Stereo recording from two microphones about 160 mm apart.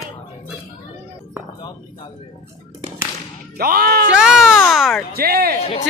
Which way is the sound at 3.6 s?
70° right (ahead or behind).